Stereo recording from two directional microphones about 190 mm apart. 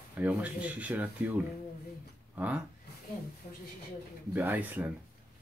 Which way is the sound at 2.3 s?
10° right (ahead or behind).